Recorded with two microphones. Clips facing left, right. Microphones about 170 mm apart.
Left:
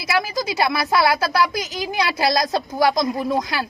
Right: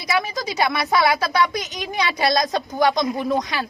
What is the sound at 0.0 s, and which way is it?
A woman's voice, centre (ahead or behind).